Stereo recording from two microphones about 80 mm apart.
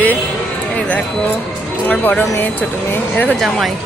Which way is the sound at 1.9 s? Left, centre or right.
Centre.